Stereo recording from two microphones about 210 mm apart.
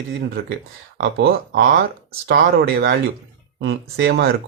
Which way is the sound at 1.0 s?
50° right (ahead or behind).